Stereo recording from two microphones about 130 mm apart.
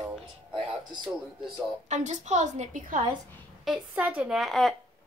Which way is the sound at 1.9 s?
65° right (ahead or behind).